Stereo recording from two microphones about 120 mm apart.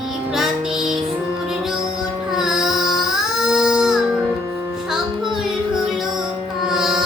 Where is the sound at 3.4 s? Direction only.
5° right (ahead or behind).